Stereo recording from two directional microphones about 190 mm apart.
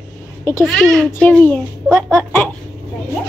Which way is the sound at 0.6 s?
Centre (ahead or behind).